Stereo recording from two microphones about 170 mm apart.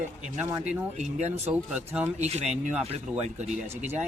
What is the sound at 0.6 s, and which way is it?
Speech, 40° right (ahead or behind).